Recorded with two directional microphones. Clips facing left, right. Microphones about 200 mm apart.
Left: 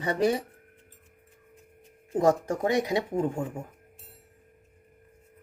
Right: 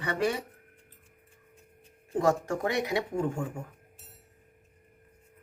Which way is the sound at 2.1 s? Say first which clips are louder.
Left 3 dB; 20° left (ahead or behind).